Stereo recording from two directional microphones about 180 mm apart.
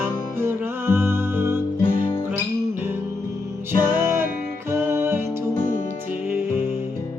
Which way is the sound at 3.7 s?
10° right (ahead or behind).